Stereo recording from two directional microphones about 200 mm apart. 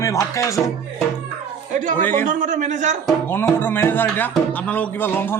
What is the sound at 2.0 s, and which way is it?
Speech, 10° left (ahead or behind).